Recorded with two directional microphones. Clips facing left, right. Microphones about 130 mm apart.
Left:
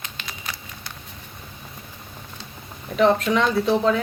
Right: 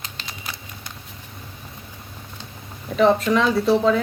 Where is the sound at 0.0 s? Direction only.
35° right (ahead or behind).